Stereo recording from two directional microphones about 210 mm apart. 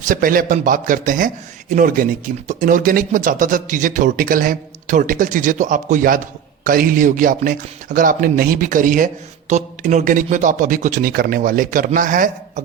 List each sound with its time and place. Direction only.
0.0 s speech: 40° right (ahead or behind)